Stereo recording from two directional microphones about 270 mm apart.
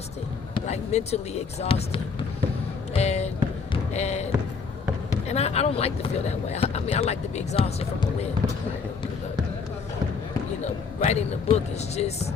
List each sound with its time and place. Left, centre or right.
0.5 s speech: left
2.9 s a sound: left
3.9 s speech: left
5.3 s speech: left
10.6 s speech: left